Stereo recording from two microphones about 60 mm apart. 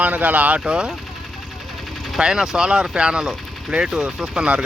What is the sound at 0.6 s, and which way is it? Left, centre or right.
Speech, centre.